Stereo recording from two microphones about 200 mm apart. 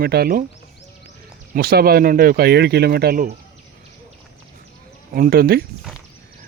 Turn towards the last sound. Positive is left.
turn(degrees=-50)  # may be behind; listen again after turning